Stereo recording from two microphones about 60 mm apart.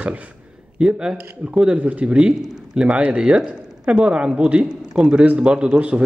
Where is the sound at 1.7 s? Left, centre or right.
Right.